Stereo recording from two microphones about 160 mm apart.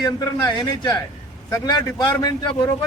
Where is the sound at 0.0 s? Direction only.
25° left (ahead or behind).